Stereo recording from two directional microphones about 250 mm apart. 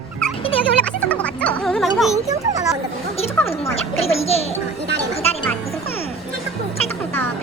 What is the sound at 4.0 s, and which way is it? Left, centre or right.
Music, left.